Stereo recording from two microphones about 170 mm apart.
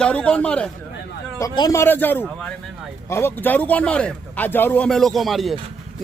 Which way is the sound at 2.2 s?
5° right (ahead or behind).